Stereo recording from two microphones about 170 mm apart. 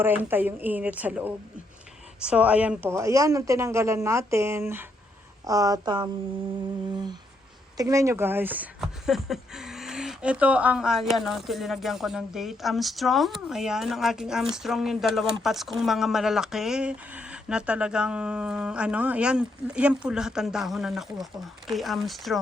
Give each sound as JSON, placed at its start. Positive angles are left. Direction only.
{"t": 0.0, "sound": "a man's voice", "side_deg": -10}